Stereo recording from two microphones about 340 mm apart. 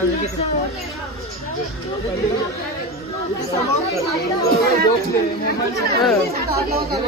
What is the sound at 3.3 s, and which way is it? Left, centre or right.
Speech, centre.